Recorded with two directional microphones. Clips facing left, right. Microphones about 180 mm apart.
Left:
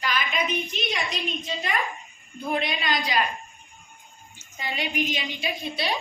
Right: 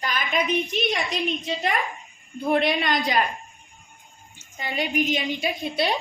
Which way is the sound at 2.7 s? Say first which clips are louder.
Right 4 dB; 50° right (ahead or behind).